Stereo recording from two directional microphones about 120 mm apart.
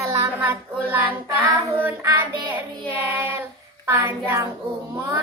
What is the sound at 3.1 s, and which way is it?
Child singing, 20° right (ahead or behind).